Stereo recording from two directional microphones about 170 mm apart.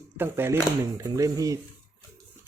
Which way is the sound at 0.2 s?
15° right (ahead or behind).